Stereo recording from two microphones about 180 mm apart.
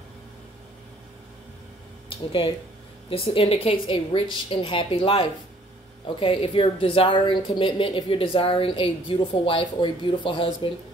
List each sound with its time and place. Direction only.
2.0 s a woman's voice: 30° left (ahead or behind)